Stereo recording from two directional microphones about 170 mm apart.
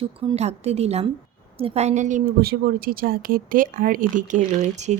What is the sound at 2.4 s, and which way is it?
Speech, 65° right (ahead or behind).